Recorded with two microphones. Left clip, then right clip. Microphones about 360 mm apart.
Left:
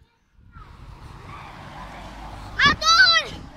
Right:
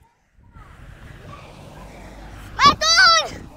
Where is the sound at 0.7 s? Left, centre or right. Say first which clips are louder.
Right 3 dB; centre.